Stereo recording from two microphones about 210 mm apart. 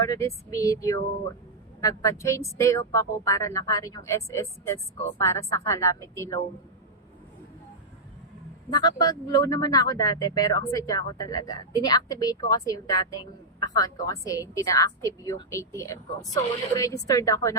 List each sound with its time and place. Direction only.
0.0 s speech: 15° left (ahead or behind)
8.7 s speech: 20° left (ahead or behind)